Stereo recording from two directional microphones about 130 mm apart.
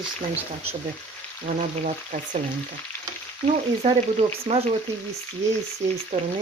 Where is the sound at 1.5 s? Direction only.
90° right.